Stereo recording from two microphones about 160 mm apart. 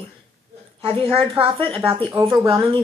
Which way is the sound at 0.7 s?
35° right (ahead or behind).